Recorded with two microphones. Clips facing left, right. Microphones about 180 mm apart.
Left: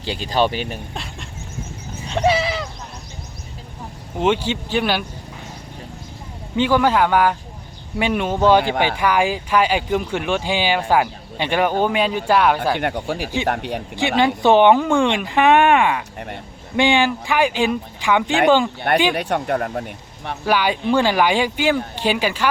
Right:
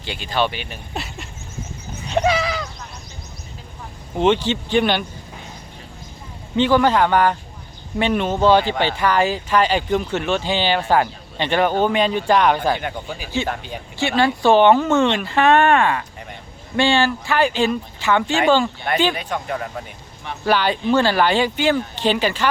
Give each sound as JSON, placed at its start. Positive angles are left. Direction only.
{"t": 0.0, "sound": "speech", "side_deg": 35}
{"t": 0.9, "sound": "a sound", "side_deg": -5}
{"t": 2.2, "sound": "sheep", "side_deg": 30}
{"t": 4.2, "sound": "speech", "side_deg": 10}
{"t": 6.6, "sound": "speech", "side_deg": 10}
{"t": 12.8, "sound": "speech", "side_deg": 70}
{"t": 13.9, "sound": "speech", "side_deg": 15}
{"t": 16.1, "sound": "speech", "side_deg": 55}
{"t": 16.7, "sound": "speech", "side_deg": 15}
{"t": 19.1, "sound": "speech", "side_deg": 65}
{"t": 20.4, "sound": "speech", "side_deg": 10}